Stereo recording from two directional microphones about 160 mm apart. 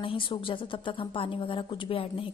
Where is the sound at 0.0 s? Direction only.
30° left (ahead or behind).